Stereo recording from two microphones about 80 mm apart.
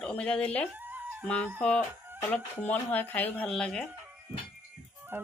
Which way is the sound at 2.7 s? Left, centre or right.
Left.